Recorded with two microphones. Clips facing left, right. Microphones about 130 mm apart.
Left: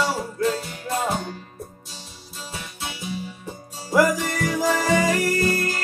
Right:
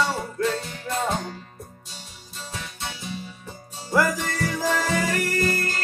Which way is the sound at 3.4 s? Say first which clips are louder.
Left 2 dB; 15° left (ahead or behind).